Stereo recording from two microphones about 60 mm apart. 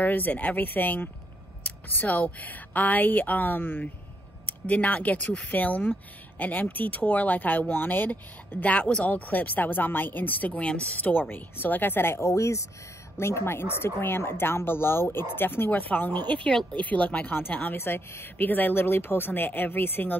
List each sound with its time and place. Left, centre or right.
0.0 s speech: left
12.2 s speech: left
13.2 s speech: left